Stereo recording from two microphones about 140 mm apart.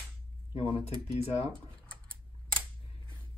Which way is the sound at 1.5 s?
35° right (ahead or behind).